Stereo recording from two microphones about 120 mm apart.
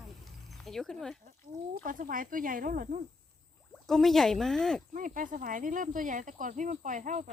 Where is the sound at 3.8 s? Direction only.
Centre (ahead or behind).